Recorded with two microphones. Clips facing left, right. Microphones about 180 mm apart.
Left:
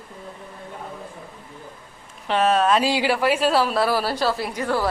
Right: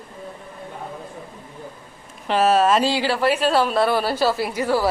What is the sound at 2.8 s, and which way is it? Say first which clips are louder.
A woman's voice: even; 15° left (ahead or behind).